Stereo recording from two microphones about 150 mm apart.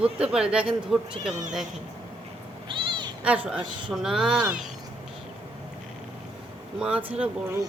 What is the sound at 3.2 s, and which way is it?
A woman's voice, 10° right (ahead or behind).